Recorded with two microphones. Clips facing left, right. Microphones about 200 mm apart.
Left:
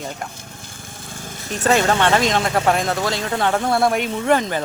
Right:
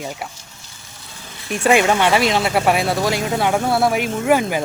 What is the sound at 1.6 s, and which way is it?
Speech, 10° right (ahead or behind).